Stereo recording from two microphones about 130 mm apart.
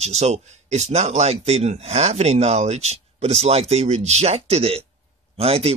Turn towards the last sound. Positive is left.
turn(degrees=-50)  # may be behind; listen again after turning